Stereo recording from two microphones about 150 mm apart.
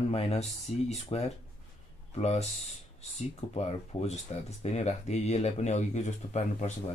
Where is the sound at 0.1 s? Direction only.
45° left (ahead or behind).